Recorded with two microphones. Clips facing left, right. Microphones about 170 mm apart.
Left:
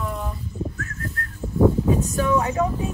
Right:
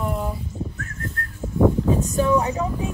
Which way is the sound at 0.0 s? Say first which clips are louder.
Right 3 dB; 20° right (ahead or behind).